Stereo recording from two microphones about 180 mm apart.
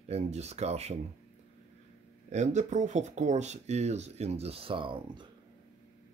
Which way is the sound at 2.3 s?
40° right (ahead or behind).